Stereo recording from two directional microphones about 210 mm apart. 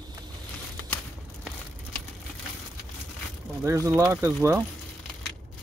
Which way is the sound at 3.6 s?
15° right (ahead or behind).